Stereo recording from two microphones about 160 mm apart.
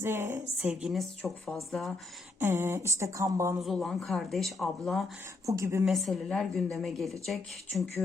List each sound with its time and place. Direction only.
0.0 s a sound: 15° right (ahead or behind)
0.7 s speech: 5° right (ahead or behind)
2.4 s a sound: 15° right (ahead or behind)
3.6 s speech: centre (ahead or behind)
5.5 s speech: 20° right (ahead or behind)
5.8 s speech: centre (ahead or behind)